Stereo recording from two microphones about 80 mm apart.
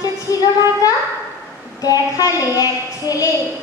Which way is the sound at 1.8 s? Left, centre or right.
Left.